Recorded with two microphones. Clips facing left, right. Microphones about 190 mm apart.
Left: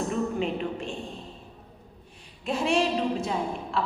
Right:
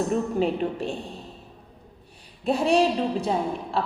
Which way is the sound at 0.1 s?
40° right (ahead or behind).